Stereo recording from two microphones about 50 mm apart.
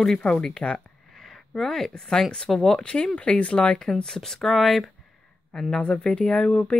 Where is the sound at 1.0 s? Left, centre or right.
Centre.